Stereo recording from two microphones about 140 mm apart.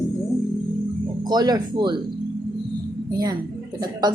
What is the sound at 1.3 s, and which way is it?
Speech, 30° right (ahead or behind).